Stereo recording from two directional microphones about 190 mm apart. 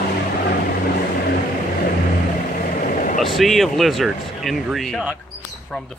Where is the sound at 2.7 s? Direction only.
45° left (ahead or behind).